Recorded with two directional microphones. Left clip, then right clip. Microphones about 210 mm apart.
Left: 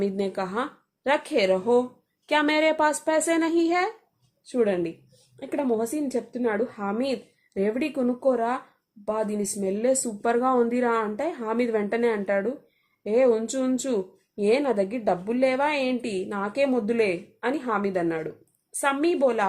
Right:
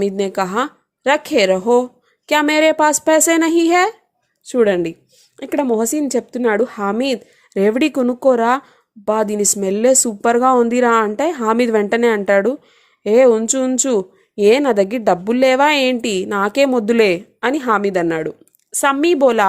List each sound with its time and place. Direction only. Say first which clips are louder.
0.0 s speech: right 9 dB; 30° right (ahead or behind)